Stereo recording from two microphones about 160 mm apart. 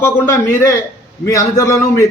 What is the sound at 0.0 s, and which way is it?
A man's voice, 15° left (ahead or behind).